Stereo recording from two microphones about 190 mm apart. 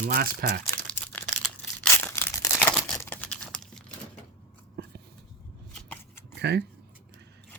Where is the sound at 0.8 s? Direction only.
5° left (ahead or behind).